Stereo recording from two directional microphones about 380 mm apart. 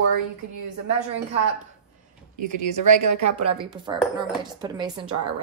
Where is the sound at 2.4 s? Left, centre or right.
Right.